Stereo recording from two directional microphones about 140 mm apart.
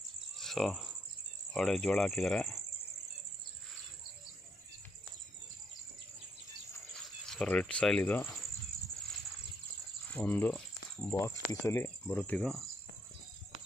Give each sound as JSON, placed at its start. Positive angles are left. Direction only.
{"t": 0.4, "sound": "speech", "side_deg": 0}
{"t": 7.2, "sound": "speech", "side_deg": 5}
{"t": 10.1, "sound": "speech", "side_deg": 10}
{"t": 11.1, "sound": "speech", "side_deg": 20}
{"t": 12.1, "sound": "speech", "side_deg": 5}